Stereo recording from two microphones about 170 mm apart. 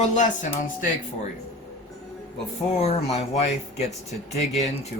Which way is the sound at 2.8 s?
40° left (ahead or behind).